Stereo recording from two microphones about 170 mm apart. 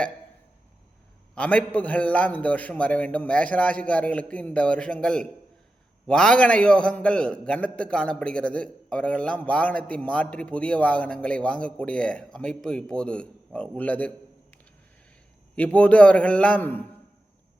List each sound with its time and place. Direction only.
1.4 s a man's voice: 10° left (ahead or behind)
15.5 s a man's voice: 5° left (ahead or behind)